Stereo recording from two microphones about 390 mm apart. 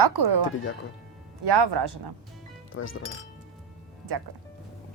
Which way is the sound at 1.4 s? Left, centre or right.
Right.